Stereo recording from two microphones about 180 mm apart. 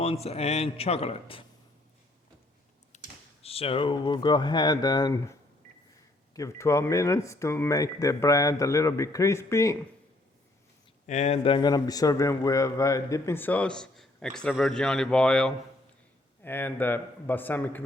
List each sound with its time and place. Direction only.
0.0 s a man's voice: 35° left (ahead or behind)
2.9 s a sound: 40° left (ahead or behind)
3.4 s a man's voice: 35° left (ahead or behind); by 9.7 s 15° left (ahead or behind)
11.0 s a man's voice: 40° left (ahead or behind); by 17.8 s 10° left (ahead or behind)